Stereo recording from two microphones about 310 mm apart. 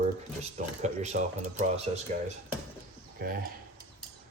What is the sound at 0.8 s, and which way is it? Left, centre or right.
Speech, right.